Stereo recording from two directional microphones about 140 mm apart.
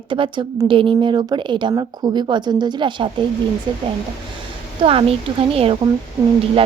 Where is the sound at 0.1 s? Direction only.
35° right (ahead or behind).